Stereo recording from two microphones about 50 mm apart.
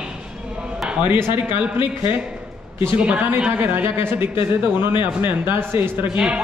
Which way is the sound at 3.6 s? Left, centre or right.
Right.